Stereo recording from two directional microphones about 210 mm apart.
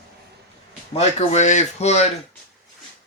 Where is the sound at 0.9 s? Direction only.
35° left (ahead or behind).